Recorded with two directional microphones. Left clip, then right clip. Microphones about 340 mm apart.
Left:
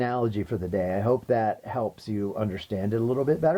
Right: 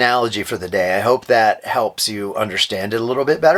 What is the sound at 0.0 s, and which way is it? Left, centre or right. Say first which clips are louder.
Speech: right 11 dB; centre.